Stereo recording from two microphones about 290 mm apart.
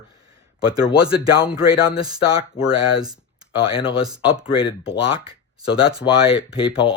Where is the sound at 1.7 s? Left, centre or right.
Centre.